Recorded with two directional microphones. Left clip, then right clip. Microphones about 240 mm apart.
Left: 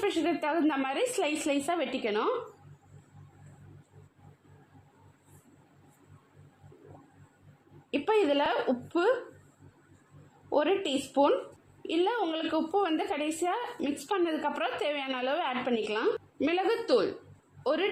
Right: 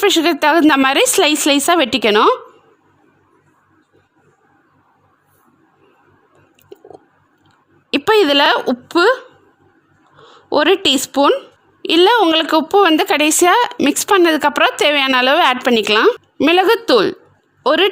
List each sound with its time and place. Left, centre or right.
0.0 s a woman's voice: right
7.9 s a woman's voice: right
10.5 s a woman's voice: right